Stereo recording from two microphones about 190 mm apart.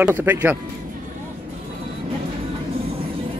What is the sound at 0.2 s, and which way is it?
Speech, 10° right (ahead or behind).